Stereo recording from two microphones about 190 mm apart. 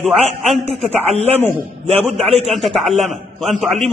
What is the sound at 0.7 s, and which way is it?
Speech, 35° right (ahead or behind).